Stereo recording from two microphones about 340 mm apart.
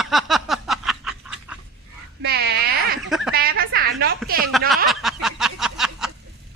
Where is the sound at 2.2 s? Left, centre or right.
Right.